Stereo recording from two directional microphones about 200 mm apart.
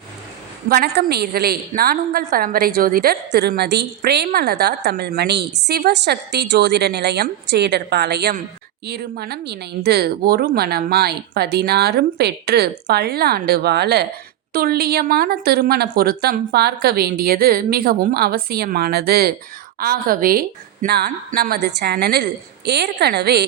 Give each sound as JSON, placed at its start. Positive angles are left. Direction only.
{"t": 0.7, "sound": "a woman's voice", "side_deg": -50}